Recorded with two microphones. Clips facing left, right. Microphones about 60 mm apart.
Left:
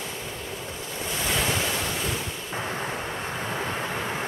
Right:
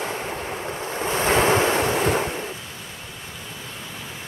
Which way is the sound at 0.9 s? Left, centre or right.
Right.